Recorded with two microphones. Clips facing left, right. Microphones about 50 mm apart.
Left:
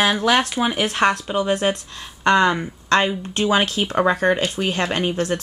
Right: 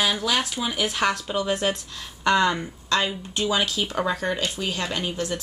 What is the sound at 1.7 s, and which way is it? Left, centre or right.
Speech, left.